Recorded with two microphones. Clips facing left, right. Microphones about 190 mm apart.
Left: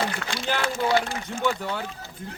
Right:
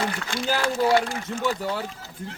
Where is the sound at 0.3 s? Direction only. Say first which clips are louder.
Right 2 dB; 45° right (ahead or behind).